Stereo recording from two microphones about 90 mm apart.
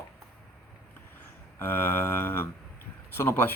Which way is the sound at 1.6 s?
25° left (ahead or behind).